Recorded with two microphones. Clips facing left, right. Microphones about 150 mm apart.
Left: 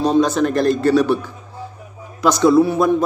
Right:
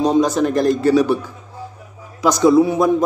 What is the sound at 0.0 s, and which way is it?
A man's voice, 15° right (ahead or behind).